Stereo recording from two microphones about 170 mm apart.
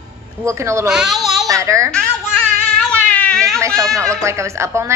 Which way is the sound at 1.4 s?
20° right (ahead or behind).